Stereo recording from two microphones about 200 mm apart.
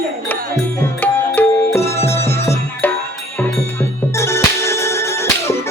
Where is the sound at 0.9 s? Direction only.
10° left (ahead or behind).